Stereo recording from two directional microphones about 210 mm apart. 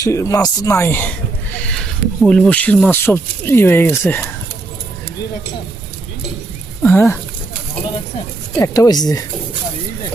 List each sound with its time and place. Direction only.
0.0 s speech: 15° left (ahead or behind)
6.8 s speech: 10° left (ahead or behind)
8.5 s speech: 15° left (ahead or behind)